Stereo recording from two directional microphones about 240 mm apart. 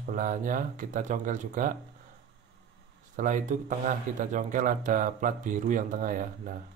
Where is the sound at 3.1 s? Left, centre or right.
Right.